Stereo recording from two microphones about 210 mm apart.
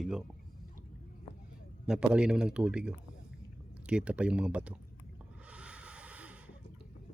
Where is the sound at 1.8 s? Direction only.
5° right (ahead or behind).